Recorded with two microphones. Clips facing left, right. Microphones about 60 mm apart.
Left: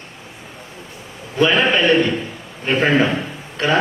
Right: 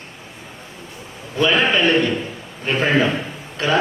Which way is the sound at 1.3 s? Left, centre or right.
Left.